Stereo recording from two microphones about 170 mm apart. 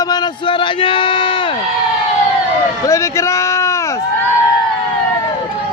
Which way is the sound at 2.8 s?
15° left (ahead or behind).